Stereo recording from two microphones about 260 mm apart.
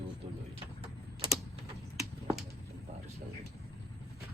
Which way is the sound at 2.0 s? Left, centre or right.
Centre.